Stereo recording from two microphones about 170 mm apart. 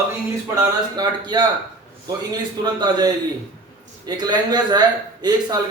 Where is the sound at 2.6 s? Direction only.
25° right (ahead or behind).